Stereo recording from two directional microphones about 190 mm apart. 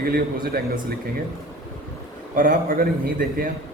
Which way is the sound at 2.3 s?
45° right (ahead or behind).